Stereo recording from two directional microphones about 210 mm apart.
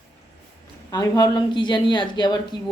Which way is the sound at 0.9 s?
20° left (ahead or behind).